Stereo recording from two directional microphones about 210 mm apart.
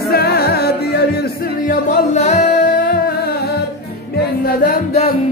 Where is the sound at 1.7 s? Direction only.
35° left (ahead or behind).